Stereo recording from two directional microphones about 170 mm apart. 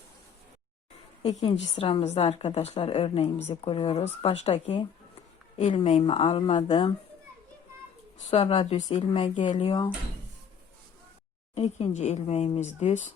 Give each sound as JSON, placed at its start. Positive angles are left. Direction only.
{"t": 1.3, "sound": "a woman's voice", "side_deg": 25}
{"t": 6.0, "sound": "speech", "side_deg": 35}
{"t": 8.3, "sound": "speech", "side_deg": 35}
{"t": 11.5, "sound": "speech", "side_deg": 40}